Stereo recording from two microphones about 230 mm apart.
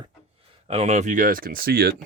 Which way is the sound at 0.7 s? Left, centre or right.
Right.